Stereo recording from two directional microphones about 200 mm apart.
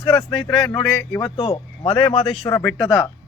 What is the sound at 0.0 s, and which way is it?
Speech, 20° left (ahead or behind).